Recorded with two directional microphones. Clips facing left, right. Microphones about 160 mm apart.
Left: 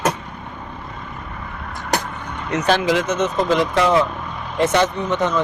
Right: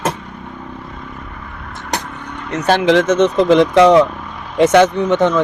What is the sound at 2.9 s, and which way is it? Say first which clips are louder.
Speech: right 7 dB; 85° right.